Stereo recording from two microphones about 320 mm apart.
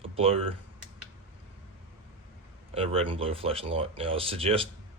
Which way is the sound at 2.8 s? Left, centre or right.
Centre.